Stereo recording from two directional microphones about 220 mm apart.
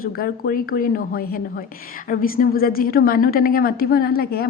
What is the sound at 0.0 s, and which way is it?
A woman's voice, 40° left (ahead or behind).